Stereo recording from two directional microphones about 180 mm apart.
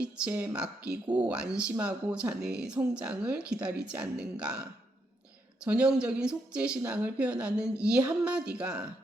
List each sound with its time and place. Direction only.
0.0 s speech: 10° right (ahead or behind)
5.6 s speech: 5° right (ahead or behind)